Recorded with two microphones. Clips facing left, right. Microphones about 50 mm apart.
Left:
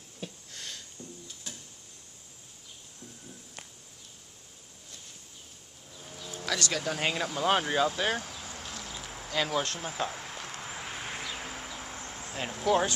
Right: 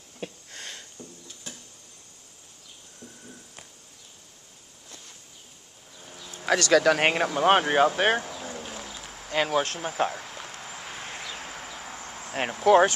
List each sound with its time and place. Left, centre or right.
0.2 s a sound: right
5.9 s insect: centre
6.7 s speech: right
7.0 s speech: right
8.6 s a sound: right
9.3 s speech: right
9.6 s speech: centre
9.8 s speech: right
10.2 s vehicle: centre
12.0 s cricket: centre
12.3 s speech: right